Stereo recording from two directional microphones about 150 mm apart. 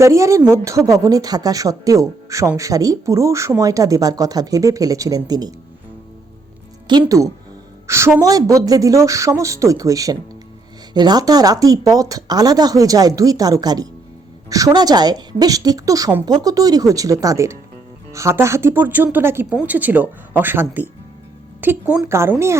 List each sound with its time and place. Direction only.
0.0 s a woman's voice: 20° right (ahead or behind)
6.9 s a woman's voice: 30° right (ahead or behind)
7.9 s a woman's voice: 20° right (ahead or behind)